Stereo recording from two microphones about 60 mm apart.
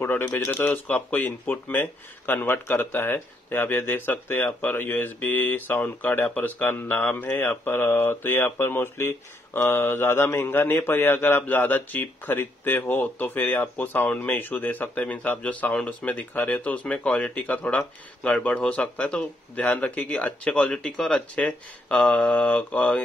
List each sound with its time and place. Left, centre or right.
0.0 s speech: left
0.7 s speech: left
15.7 s speech: left